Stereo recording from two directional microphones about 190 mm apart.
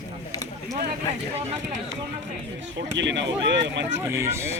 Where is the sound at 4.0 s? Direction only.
15° right (ahead or behind).